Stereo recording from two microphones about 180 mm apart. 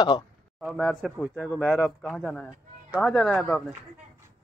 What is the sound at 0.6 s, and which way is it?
Speech, centre (ahead or behind).